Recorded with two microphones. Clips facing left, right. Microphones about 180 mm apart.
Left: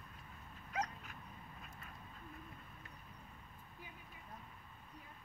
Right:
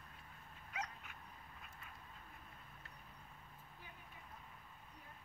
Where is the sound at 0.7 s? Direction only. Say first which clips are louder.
Left 6 dB; 40° left (ahead or behind).